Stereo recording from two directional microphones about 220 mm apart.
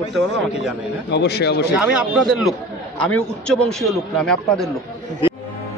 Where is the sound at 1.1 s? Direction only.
50° left (ahead or behind).